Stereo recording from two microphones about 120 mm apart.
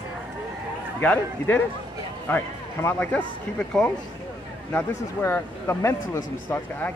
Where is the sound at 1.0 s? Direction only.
15° left (ahead or behind).